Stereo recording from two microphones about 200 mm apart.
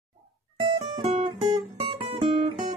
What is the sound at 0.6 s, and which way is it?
Music, 25° right (ahead or behind).